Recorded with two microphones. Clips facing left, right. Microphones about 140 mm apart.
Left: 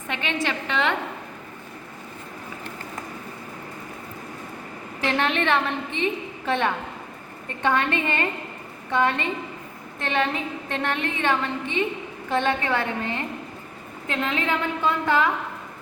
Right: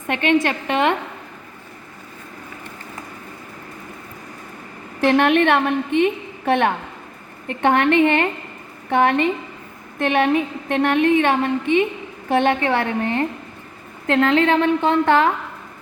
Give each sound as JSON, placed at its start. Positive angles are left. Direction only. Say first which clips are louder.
{"t": 0.1, "sound": "a woman's voice", "louder": "right 9 dB", "side_deg": -55}
{"t": 5.0, "sound": "a woman's voice", "louder": "right 8 dB", "side_deg": -55}
{"t": 14.1, "sound": "a woman's voice", "louder": "right 10 dB", "side_deg": -85}